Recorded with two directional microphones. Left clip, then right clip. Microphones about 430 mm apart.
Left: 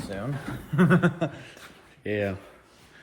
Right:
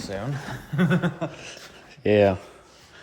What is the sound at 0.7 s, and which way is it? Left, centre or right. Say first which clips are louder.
Speech: left 2 dB; centre.